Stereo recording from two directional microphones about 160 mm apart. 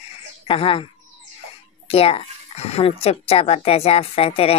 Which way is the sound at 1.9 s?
35° left (ahead or behind).